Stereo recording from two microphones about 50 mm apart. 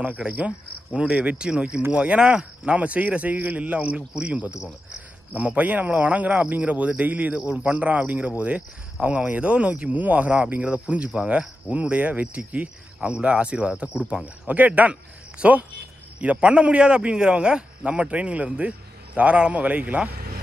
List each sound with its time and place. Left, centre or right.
0.3 s a man's voice: right